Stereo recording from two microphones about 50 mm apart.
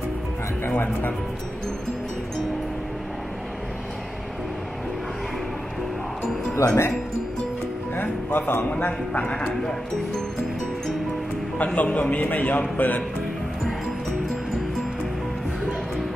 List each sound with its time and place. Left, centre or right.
0.7 s a man's voice: left
6.5 s speech: left
7.9 s music: left
8.6 s speech: left
9.2 s speech: left
11.5 s speech: left